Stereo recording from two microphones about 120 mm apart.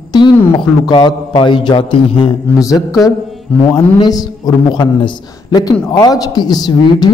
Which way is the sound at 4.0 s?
30° left (ahead or behind).